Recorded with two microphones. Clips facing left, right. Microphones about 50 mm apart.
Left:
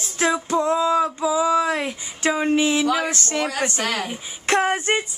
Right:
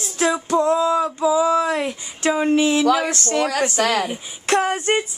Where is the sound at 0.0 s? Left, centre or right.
Centre.